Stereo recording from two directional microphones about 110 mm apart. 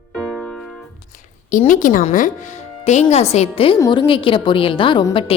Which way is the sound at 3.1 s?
80° left.